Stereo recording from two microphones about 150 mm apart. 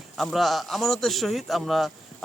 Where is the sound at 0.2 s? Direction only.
Centre (ahead or behind).